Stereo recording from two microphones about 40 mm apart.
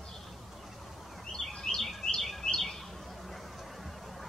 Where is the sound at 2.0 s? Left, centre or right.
Centre.